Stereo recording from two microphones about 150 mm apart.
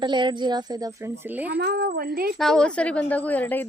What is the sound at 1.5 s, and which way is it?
Speech, 90° right.